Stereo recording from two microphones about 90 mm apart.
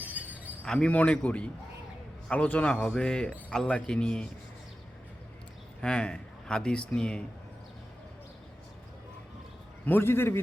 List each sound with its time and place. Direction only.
0.0 s a sound: 20° right (ahead or behind)
0.6 s a man's voice: 10° left (ahead or behind)
5.8 s a man's voice: 10° left (ahead or behind)
9.8 s a man's voice: 25° left (ahead or behind)